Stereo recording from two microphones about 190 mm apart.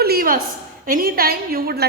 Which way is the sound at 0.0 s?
55° right (ahead or behind).